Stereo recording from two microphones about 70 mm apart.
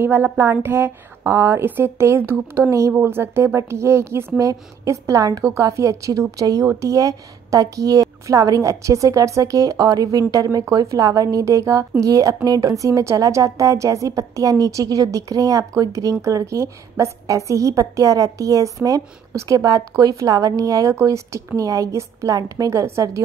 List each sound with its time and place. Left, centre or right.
0.0 s a woman's voice: right